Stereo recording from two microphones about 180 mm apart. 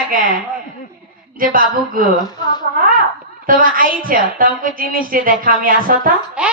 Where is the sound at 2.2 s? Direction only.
25° left (ahead or behind).